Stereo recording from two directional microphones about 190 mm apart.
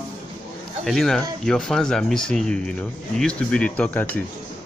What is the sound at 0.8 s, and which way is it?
Speech, centre (ahead or behind).